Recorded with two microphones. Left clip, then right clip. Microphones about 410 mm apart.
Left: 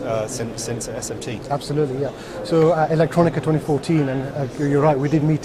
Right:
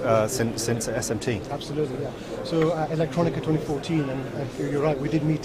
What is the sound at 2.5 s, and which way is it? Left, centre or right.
Speech, left.